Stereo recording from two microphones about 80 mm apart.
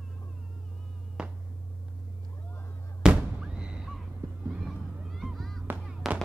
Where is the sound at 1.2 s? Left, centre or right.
Centre.